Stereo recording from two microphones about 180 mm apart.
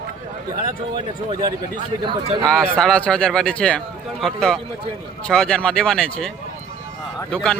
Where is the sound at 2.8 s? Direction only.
5° left (ahead or behind).